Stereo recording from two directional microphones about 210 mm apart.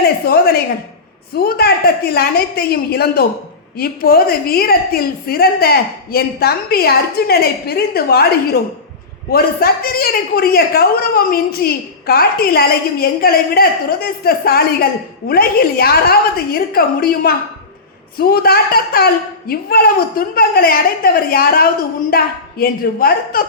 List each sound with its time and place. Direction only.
0.3 s a man's voice: 45° left (ahead or behind)